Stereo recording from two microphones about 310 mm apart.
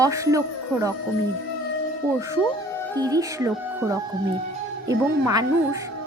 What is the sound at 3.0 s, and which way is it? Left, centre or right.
Speech, centre.